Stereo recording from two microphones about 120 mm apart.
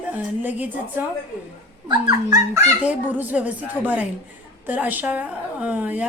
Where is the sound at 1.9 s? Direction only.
35° right (ahead or behind).